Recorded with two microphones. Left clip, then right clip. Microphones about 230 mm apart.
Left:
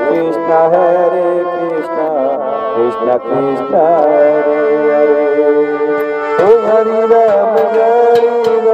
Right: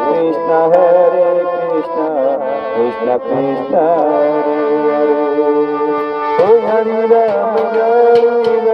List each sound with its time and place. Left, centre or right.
0.5 s music: left
3.9 s music: left